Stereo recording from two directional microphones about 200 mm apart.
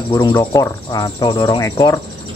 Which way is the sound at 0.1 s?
20° left (ahead or behind).